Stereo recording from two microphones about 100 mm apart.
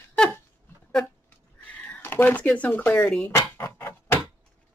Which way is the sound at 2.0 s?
20° left (ahead or behind).